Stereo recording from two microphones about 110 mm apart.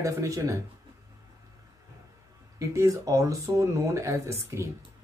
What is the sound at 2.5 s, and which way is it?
A man's voice, 30° right (ahead or behind).